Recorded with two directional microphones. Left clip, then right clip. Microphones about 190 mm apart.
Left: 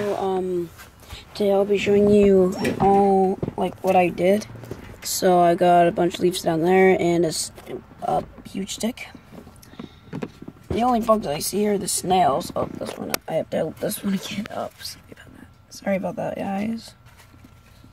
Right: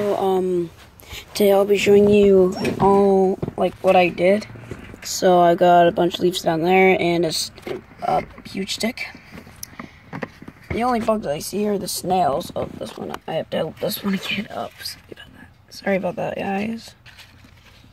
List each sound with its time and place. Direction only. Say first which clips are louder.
0.1 s a sound: right 4 dB; 30° right (ahead or behind)
1.1 s speech: right 4 dB; 45° right (ahead or behind)
2.0 s speech: right 2 dB; 5° right (ahead or behind)
2.9 s speech: right 1 dB; 25° right (ahead or behind)
3.9 s speech: right 2 dB; 5° left (ahead or behind)
8.0 s speech: right 3 dB; centre (ahead or behind)
8.6 s speech: right 4 dB; 40° left (ahead or behind)
11.1 s speech: left 1 dB; centre (ahead or behind); by 14.7 s 25° right (ahead or behind)
15.8 s speech: right 3 dB; 25° right (ahead or behind)